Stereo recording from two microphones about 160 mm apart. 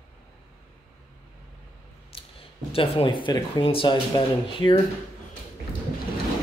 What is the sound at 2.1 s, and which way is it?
Clicking, 35° left (ahead or behind).